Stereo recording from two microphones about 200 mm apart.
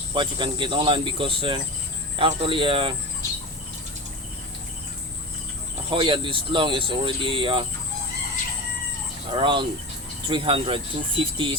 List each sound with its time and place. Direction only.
0.1 s speech: 25° right (ahead or behind)
5.9 s speech: 25° right (ahead or behind)
9.3 s speech: 25° right (ahead or behind)